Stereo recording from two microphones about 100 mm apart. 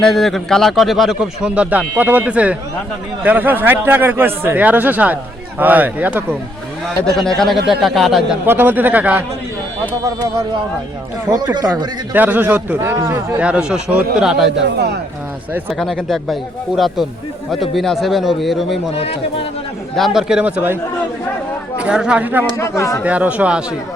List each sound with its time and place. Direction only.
0.0 s speech: centre (ahead or behind)
1.5 s a man's voice: 15° right (ahead or behind)
7.2 s speech: 5° left (ahead or behind)
8.4 s speech: 20° right (ahead or behind)
11.3 s speech: 40° right (ahead or behind)
12.1 s a man's voice: 15° right (ahead or behind)
15.8 s speech: 5° left (ahead or behind)
18.9 s speech: 75° left (ahead or behind)
20.1 s a man's voice: 5° right (ahead or behind)
21.8 s speech: 10° right (ahead or behind)
22.5 s speech: 30° left (ahead or behind)
23.0 s a man's voice: 15° right (ahead or behind)